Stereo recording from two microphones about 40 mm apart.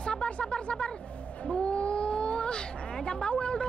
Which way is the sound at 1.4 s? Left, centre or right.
Left.